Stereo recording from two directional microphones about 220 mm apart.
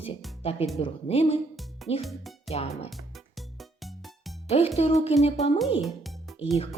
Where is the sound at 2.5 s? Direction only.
30° left (ahead or behind).